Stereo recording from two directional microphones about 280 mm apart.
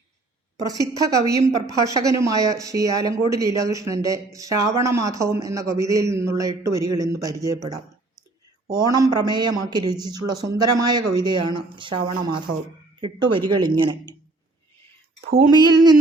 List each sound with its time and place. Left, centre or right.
0.9 s speech: centre
13.0 s speech: centre
15.4 s speech: centre